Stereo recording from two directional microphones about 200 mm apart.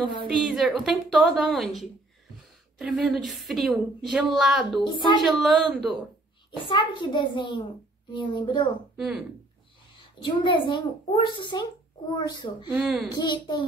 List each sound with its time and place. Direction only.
0.4 s a woman's voice: centre (ahead or behind)
4.9 s a child's voice: 25° left (ahead or behind)
5.3 s a woman's voice: centre (ahead or behind)
6.6 s a child's voice: 25° left (ahead or behind)
8.9 s speech: centre (ahead or behind)
9.9 s a child's voice: 25° left (ahead or behind)
12.6 s a woman's voice: 5° right (ahead or behind)
13.1 s a child's voice: 20° left (ahead or behind)